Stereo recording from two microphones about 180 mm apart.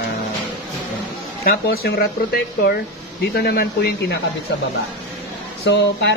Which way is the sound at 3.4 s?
60° left (ahead or behind).